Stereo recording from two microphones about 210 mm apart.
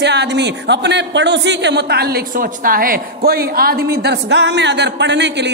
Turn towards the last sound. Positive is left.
turn(degrees=-55)  # may be behind; listen again after turning